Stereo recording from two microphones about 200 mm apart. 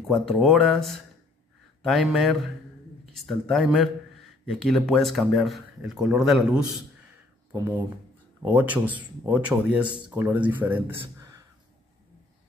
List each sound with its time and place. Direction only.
0.1 s speech: centre (ahead or behind)
7.5 s speech: 15° right (ahead or behind)